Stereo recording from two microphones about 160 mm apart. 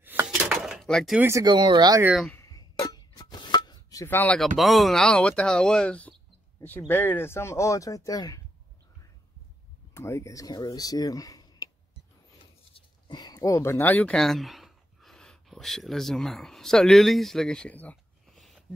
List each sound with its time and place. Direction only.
0.0 s a sound: 10° right (ahead or behind)
1.2 s speech: 20° right (ahead or behind)
2.4 s a sound: 20° left (ahead or behind)
4.6 s speech: centre (ahead or behind); by 8.4 s 20° left (ahead or behind)
9.9 s speech: 20° left (ahead or behind)
12.7 s speech: 25° left (ahead or behind); by 18.6 s centre (ahead or behind)